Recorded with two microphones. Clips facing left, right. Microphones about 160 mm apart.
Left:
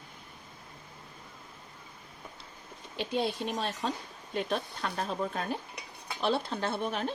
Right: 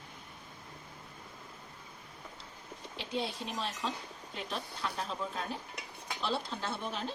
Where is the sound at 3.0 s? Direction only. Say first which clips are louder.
Left 6 dB; 60° left (ahead or behind).